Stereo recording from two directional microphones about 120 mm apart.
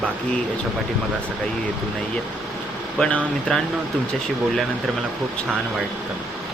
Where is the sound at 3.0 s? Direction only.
10° left (ahead or behind).